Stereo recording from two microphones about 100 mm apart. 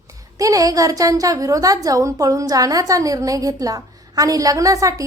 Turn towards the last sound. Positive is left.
turn(degrees=-35)  # may be behind; listen again after turning